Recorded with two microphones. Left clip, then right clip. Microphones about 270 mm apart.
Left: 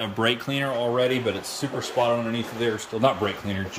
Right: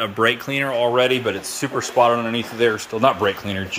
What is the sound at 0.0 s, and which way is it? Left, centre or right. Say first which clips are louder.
A man's voice: right 5 dB; centre.